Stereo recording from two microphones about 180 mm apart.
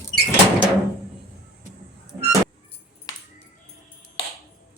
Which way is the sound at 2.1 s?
15° right (ahead or behind).